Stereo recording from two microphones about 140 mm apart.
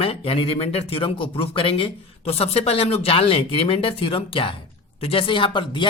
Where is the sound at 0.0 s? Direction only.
40° left (ahead or behind).